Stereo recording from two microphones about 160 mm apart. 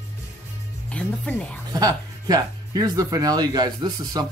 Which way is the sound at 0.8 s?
10° left (ahead or behind).